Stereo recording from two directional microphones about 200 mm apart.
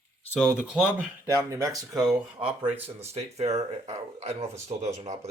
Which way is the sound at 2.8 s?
30° right (ahead or behind).